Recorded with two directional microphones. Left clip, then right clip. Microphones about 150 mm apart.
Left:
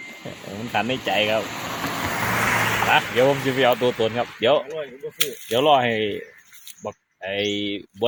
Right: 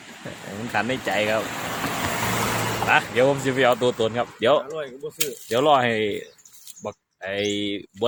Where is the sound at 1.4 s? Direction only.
65° right (ahead or behind); by 2.6 s 90° right.